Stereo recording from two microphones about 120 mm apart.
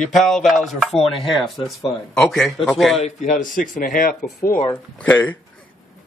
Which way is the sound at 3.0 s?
90° left.